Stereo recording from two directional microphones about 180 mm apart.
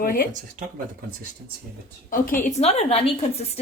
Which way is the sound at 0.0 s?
50° left (ahead or behind).